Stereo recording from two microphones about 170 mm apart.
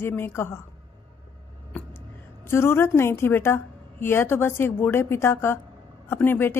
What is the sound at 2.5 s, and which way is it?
A woman's voice, 15° left (ahead or behind).